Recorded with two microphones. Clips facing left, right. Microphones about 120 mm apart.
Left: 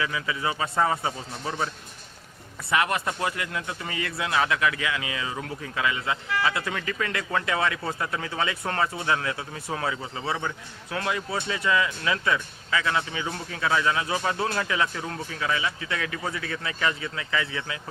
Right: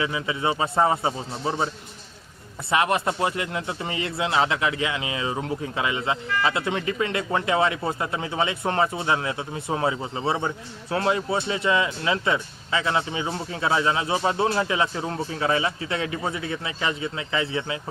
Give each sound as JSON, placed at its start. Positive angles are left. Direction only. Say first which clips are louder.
{"t": 0.0, "sound": "speech", "louder": "right 3 dB", "side_deg": -25}